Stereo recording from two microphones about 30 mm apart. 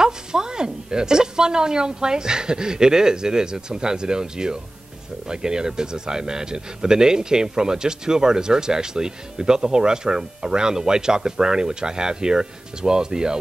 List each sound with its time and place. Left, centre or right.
0.0 s speech: right